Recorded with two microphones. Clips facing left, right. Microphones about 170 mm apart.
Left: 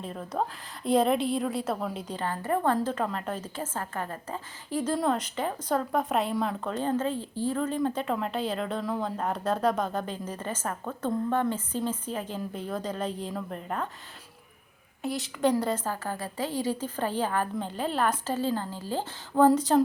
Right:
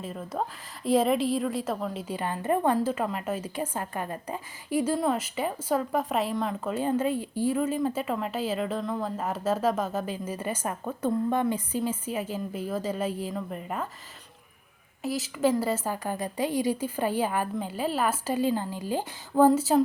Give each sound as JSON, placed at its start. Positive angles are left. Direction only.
{"t": 0.0, "sound": "a woman's voice", "side_deg": -5}
{"t": 2.1, "sound": "a woman's voice", "side_deg": -15}
{"t": 2.7, "sound": "a woman's voice", "side_deg": -5}
{"t": 15.0, "sound": "a woman's voice", "side_deg": 0}